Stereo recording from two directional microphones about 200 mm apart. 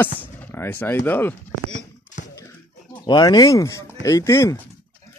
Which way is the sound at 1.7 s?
40° left (ahead or behind).